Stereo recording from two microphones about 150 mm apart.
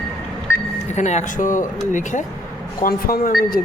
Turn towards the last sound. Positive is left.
turn(degrees=75)  # may be behind; listen again after turning